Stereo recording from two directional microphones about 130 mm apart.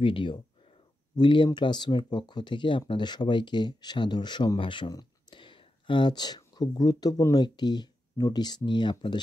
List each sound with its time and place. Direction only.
0.0 s speech: 40° left (ahead or behind)